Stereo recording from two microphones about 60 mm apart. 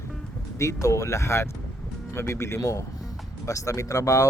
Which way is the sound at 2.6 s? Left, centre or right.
Left.